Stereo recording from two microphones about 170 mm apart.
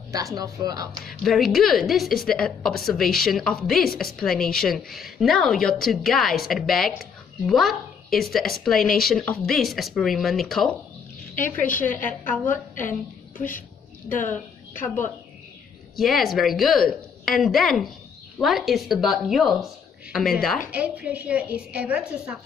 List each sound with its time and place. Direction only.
0.1 s speech: 20° right (ahead or behind)
1.0 s a woman's voice: centre (ahead or behind)
11.4 s a woman's voice: 50° left (ahead or behind)
16.0 s a woman's voice: centre (ahead or behind)